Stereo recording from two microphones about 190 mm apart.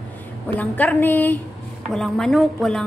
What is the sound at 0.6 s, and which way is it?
A woman's voice, 10° left (ahead or behind).